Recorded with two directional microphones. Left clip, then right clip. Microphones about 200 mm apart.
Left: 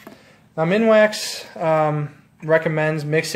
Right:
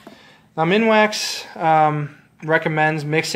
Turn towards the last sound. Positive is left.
turn(degrees=-5)  # may be behind; listen again after turning